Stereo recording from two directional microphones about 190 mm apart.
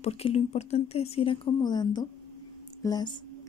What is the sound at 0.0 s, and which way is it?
A woman's voice, 35° left (ahead or behind).